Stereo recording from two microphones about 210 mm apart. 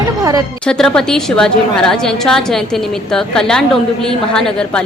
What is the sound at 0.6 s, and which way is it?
A woman's voice, 5° left (ahead or behind).